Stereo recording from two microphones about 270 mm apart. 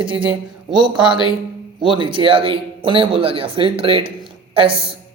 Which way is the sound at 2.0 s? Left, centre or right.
Centre.